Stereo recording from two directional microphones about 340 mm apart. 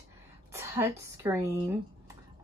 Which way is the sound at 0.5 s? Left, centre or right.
Centre.